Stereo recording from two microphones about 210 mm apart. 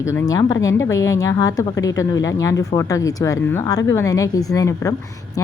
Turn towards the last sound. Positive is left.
turn(degrees=15)  # may be behind; listen again after turning